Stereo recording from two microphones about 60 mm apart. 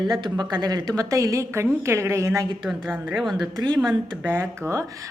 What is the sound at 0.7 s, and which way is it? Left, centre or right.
A woman's voice, right.